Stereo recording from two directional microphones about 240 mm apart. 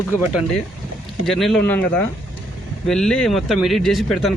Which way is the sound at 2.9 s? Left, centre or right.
Centre.